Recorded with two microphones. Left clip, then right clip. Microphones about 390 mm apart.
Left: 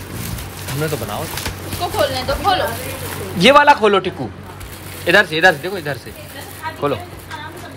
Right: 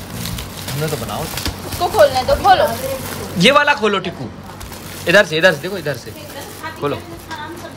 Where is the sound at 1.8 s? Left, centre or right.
Right.